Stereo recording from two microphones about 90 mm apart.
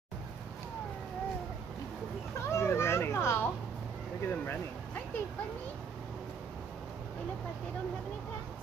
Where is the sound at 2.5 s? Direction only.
30° left (ahead or behind).